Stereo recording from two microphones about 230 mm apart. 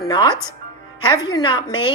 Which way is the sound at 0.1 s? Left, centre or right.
Centre.